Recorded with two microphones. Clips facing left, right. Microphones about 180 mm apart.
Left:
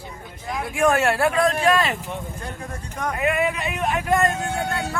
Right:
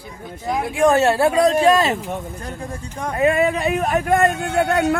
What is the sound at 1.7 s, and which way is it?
Speech, 35° right (ahead or behind).